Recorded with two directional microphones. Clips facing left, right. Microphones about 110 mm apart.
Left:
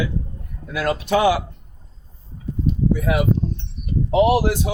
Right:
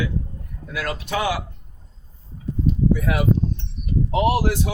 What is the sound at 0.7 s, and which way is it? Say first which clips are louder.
Speech: left 6 dB; 25° left (ahead or behind).